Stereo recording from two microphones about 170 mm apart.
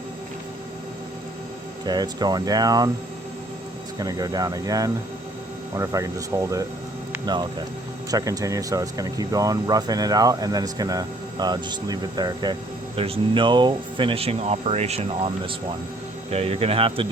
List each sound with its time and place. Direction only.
1.8 s speech: 25° right (ahead or behind)
3.9 s speech: 20° right (ahead or behind)
8.1 s speech: 20° right (ahead or behind)